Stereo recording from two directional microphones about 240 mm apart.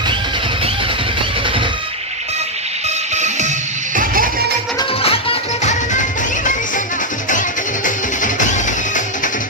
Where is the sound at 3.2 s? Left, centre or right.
Right.